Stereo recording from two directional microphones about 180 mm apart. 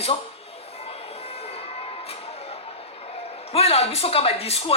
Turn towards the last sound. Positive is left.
turn(degrees=35)  # may be behind; listen again after turning